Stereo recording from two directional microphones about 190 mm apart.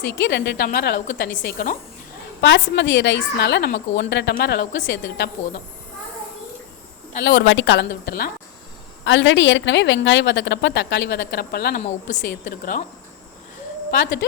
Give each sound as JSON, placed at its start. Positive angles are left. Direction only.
{"t": 0.0, "sound": "a woman's voice", "side_deg": 65}
{"t": 2.4, "sound": "a woman's voice", "side_deg": 70}
{"t": 7.2, "sound": "a woman's voice", "side_deg": 75}
{"t": 9.0, "sound": "a woman's voice", "side_deg": 75}
{"t": 11.8, "sound": "a woman's voice", "side_deg": 40}